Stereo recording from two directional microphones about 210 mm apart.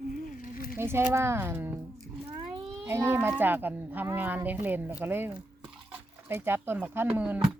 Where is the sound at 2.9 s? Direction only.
10° right (ahead or behind).